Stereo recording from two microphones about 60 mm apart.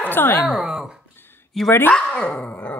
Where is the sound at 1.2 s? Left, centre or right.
Left.